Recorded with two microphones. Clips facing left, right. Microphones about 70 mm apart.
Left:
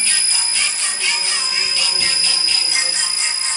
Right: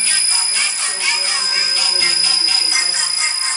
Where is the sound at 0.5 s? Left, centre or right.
Right.